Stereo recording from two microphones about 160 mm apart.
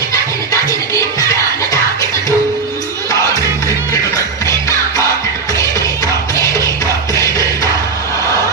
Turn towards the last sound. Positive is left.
turn(degrees=20)  # may be behind; listen again after turning